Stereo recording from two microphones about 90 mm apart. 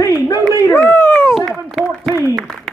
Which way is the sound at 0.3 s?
35° left (ahead or behind).